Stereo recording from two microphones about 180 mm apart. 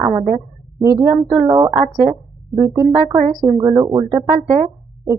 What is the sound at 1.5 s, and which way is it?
Speech, 20° right (ahead or behind).